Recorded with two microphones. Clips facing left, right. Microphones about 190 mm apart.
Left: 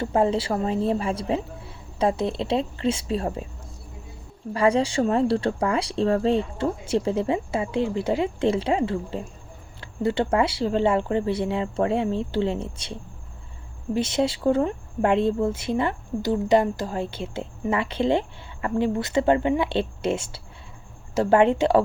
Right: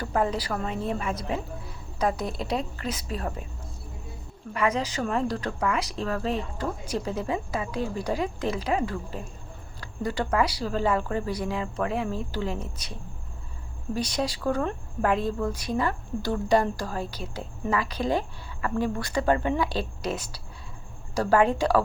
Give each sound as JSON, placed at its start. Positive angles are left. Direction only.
{"t": 0.0, "sound": "a woman's voice", "side_deg": 25}
{"t": 4.5, "sound": "a woman's voice", "side_deg": 30}